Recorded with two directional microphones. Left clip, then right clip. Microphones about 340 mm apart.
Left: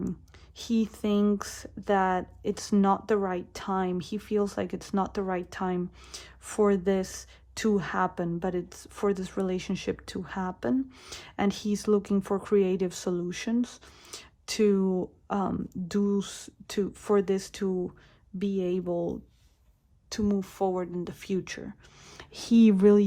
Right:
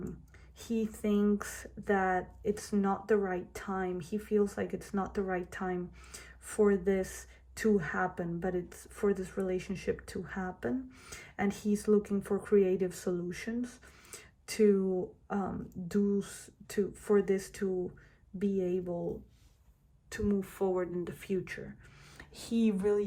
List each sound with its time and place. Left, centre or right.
0.8 s speech: centre